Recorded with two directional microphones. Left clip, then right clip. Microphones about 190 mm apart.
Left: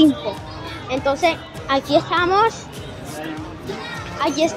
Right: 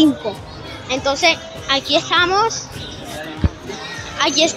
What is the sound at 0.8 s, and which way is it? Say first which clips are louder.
Speech: right 3 dB; centre (ahead or behind).